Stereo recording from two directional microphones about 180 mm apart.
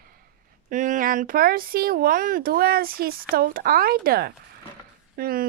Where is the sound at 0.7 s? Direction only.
45° right (ahead or behind).